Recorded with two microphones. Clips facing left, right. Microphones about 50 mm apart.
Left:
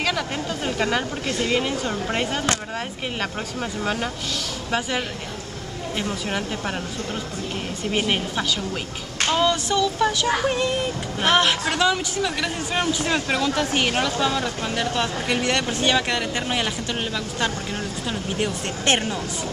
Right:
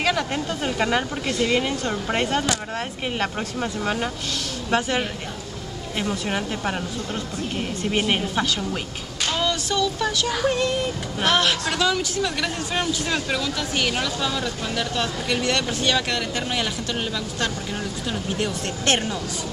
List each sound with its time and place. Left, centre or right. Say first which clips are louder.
0.0 s speech: right 2 dB; centre
7.9 s speech: even; centre
9.3 s child singing: left 4 dB; centre
9.7 s speech: left 2 dB; centre
12.2 s speech: even; centre
12.8 s speech: left 2 dB; left
18.0 s speech: left 1 dB; centre